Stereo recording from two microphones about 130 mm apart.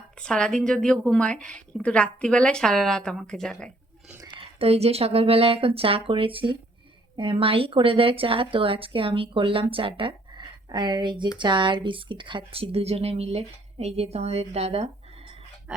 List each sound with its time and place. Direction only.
0.2 s speech: 5° left (ahead or behind)
4.4 s speech: 50° right (ahead or behind)